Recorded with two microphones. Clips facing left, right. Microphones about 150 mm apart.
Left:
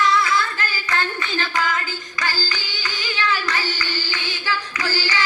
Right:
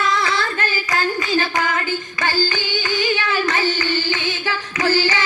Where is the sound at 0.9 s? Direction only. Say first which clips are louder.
Right 3 dB; 40° right (ahead or behind).